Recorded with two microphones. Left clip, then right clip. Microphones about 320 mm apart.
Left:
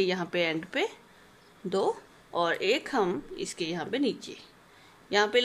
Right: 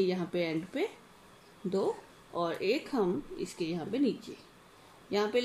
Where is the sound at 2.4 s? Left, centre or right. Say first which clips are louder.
Left 4 dB; left.